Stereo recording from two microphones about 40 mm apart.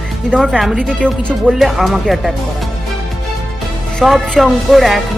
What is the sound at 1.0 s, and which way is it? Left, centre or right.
Music, left.